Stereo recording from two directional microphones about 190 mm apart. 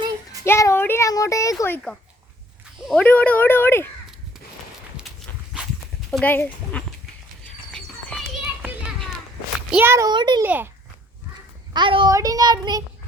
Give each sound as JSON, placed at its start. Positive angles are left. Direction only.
{"t": 0.4, "sound": "a child's voice", "side_deg": 15}
{"t": 2.8, "sound": "a child's voice", "side_deg": 5}
{"t": 5.1, "sound": "walk", "side_deg": 0}
{"t": 6.1, "sound": "a child's voice", "side_deg": 5}
{"t": 7.7, "sound": "music", "side_deg": 0}
{"t": 9.7, "sound": "a child's voice", "side_deg": -15}
{"t": 10.4, "sound": "a child's voice", "side_deg": -10}
{"t": 11.7, "sound": "a child's voice", "side_deg": -25}